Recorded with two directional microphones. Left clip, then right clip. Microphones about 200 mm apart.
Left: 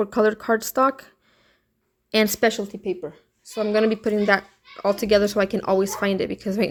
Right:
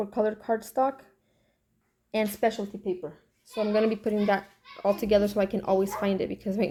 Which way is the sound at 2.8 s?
30° left (ahead or behind).